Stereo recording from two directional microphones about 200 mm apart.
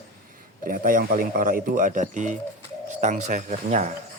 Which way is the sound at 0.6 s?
45° right (ahead or behind).